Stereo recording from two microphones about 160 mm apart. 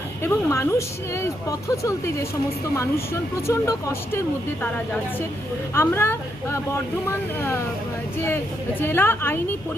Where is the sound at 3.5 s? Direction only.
20° left (ahead or behind).